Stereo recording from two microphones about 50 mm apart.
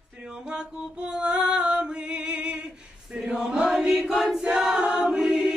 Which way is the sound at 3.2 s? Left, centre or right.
Centre.